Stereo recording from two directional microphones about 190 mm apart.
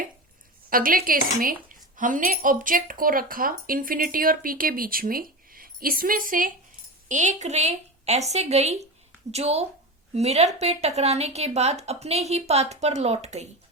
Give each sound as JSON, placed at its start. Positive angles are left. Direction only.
{"t": 0.7, "sound": "a woman's voice", "side_deg": -50}